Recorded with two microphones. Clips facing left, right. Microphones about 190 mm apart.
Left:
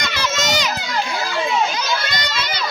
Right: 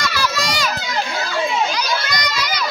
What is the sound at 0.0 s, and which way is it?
Children playing, 20° left (ahead or behind).